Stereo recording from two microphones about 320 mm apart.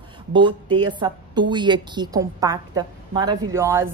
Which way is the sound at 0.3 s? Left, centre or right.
Centre.